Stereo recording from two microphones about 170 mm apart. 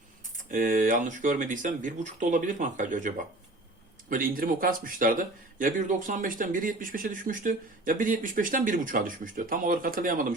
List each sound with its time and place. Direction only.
0.5 s speech: 50° right (ahead or behind)
4.1 s speech: 55° right (ahead or behind)